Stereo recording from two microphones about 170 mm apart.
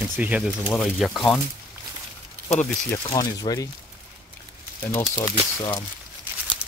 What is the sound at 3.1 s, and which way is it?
Speech, 20° left (ahead or behind).